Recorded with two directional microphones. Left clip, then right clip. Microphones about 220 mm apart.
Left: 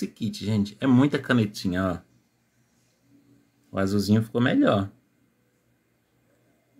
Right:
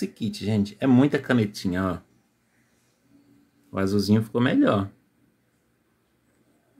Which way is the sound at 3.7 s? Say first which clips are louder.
Right 1 dB; 5° left (ahead or behind).